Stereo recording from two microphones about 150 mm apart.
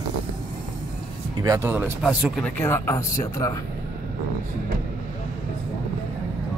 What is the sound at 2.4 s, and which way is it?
Speech, 15° left (ahead or behind).